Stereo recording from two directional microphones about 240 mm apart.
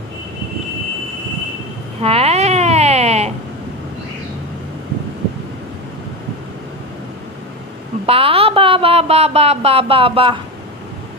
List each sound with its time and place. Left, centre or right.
2.0 s baby cry: right
8.1 s speech: right